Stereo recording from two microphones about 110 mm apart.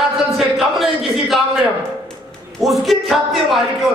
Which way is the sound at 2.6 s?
Centre (ahead or behind).